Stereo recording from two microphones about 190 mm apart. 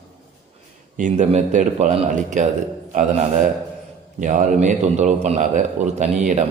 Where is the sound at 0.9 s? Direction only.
40° right (ahead or behind).